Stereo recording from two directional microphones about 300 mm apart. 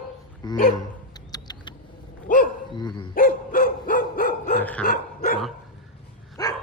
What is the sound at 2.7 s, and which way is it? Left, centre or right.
Speech, centre.